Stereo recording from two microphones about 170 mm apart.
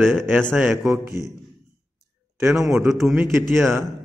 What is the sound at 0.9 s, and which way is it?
Speech, 20° right (ahead or behind).